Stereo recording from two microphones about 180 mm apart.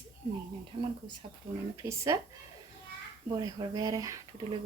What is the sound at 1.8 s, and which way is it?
Speech, 15° right (ahead or behind).